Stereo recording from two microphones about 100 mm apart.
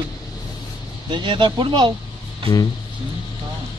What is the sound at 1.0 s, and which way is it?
Speech, 50° right (ahead or behind).